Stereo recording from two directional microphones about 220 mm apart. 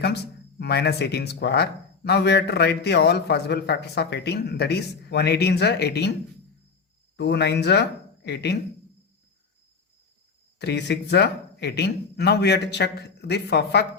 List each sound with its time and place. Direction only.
0.6 s speech: 50° left (ahead or behind)
7.2 s speech: 50° left (ahead or behind)
10.6 s speech: 50° left (ahead or behind)